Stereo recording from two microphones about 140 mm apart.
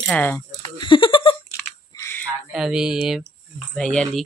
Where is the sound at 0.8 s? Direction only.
35° left (ahead or behind).